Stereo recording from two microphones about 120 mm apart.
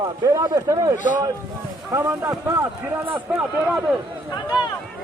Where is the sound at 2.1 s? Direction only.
25° right (ahead or behind).